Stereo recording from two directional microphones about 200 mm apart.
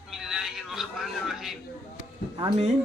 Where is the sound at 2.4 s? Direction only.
30° right (ahead or behind).